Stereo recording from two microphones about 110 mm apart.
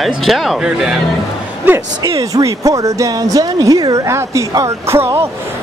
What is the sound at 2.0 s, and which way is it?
Speech, 30° right (ahead or behind).